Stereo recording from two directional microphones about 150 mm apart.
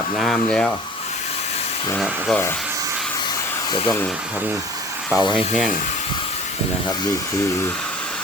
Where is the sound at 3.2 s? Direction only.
30° left (ahead or behind).